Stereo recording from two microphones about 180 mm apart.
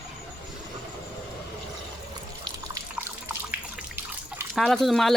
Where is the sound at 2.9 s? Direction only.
10° right (ahead or behind).